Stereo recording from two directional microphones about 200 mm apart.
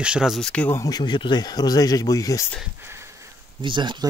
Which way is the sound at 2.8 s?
15° right (ahead or behind).